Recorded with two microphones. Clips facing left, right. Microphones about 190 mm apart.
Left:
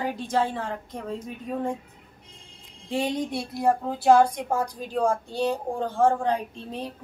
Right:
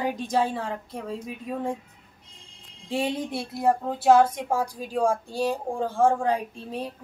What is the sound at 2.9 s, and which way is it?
A woman's voice, 5° right (ahead or behind).